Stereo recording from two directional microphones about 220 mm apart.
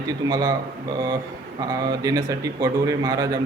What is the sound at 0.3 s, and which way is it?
Mantra, 15° right (ahead or behind).